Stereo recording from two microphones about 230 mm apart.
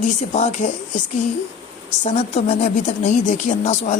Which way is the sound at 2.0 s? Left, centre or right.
Left.